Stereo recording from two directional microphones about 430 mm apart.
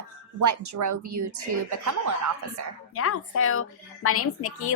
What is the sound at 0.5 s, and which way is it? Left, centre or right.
Speech, right.